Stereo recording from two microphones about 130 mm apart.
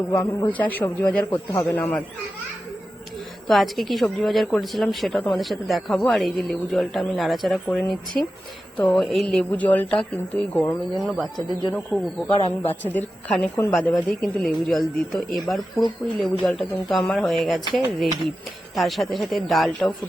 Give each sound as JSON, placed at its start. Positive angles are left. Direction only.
{"t": 0.3, "sound": "a woman's voice", "side_deg": 10}
{"t": 3.4, "sound": "a woman's voice", "side_deg": 0}
{"t": 11.0, "sound": "speech", "side_deg": 0}
{"t": 11.9, "sound": "a woman's voice", "side_deg": 15}
{"t": 12.3, "sound": "speech", "side_deg": 50}
{"t": 12.6, "sound": "a woman's voice", "side_deg": 15}
{"t": 18.8, "sound": "speech", "side_deg": 0}